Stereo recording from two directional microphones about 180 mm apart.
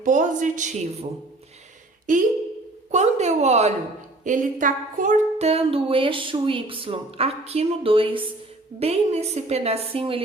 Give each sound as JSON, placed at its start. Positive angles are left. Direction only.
{"t": 0.0, "sound": "a woman's voice", "side_deg": -45}
{"t": 2.1, "sound": "a woman's voice", "side_deg": -45}
{"t": 2.9, "sound": "a sound", "side_deg": -40}